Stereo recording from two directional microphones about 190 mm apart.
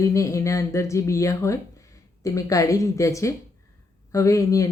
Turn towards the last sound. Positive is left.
turn(degrees=15)  # may be behind; listen again after turning